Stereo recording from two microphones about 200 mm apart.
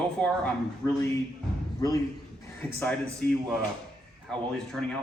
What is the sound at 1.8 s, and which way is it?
Speech, 20° left (ahead or behind).